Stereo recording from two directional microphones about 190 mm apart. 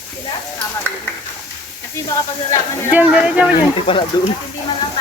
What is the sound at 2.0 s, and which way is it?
Speech, 20° left (ahead or behind).